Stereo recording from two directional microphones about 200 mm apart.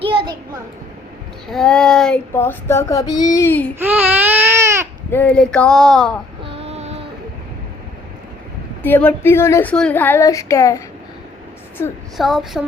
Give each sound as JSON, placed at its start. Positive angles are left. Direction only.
{"t": 1.5, "sound": "child singing", "side_deg": 0}
{"t": 3.8, "sound": "baby cry", "side_deg": -10}
{"t": 5.1, "sound": "speech", "side_deg": 5}
{"t": 6.4, "sound": "a sound", "side_deg": -30}
{"t": 8.8, "sound": "child singing", "side_deg": 10}
{"t": 12.1, "sound": "speech", "side_deg": 0}